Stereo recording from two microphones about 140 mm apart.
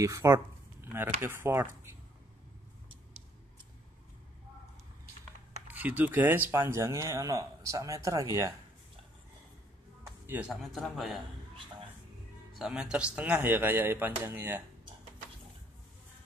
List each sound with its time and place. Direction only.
0.0 s speech: 25° right (ahead or behind)
5.7 s speech: 10° right (ahead or behind)
10.2 s speech: 15° right (ahead or behind)
10.5 s a man's voice: centre (ahead or behind)
12.5 s speech: 5° right (ahead or behind)